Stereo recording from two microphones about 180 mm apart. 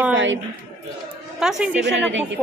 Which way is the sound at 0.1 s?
90° right.